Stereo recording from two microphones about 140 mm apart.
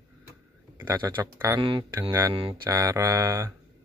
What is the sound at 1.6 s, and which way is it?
Speech, 35° right (ahead or behind).